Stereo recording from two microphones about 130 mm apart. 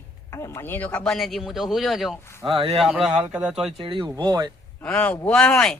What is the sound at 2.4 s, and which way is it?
Speech, 45° right (ahead or behind).